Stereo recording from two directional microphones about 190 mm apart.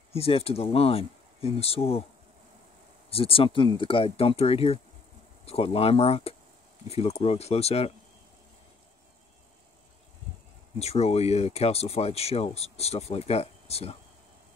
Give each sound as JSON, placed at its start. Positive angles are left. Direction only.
{"t": 0.1, "sound": "speech", "side_deg": 30}
{"t": 3.1, "sound": "speech", "side_deg": 30}
{"t": 10.8, "sound": "speech", "side_deg": 35}